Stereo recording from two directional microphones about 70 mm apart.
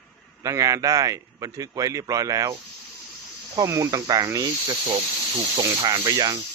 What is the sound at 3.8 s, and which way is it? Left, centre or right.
Speech, right.